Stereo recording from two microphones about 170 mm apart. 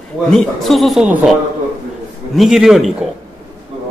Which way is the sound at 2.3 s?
Centre (ahead or behind).